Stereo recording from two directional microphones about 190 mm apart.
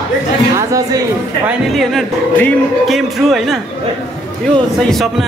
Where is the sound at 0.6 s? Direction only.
15° right (ahead or behind).